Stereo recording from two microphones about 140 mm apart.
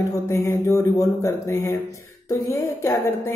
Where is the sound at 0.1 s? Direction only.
20° left (ahead or behind).